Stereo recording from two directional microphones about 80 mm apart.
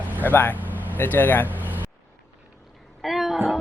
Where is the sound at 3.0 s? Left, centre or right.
Centre.